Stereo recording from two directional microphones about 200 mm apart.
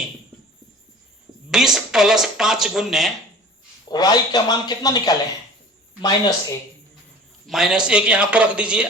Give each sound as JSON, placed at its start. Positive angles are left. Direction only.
{"t": 1.5, "sound": "speech", "side_deg": 0}
{"t": 3.8, "sound": "a man's voice", "side_deg": 20}
{"t": 7.4, "sound": "speech", "side_deg": 0}